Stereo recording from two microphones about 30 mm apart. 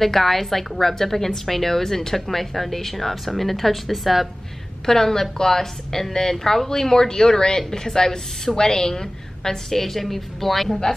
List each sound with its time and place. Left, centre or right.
0.0 s a woman's voice: centre
4.8 s a woman's voice: centre